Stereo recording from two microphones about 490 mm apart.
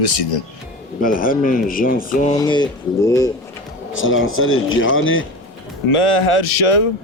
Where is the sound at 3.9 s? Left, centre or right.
Left.